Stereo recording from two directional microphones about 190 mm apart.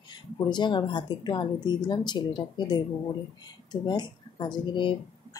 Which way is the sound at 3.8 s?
25° left (ahead or behind).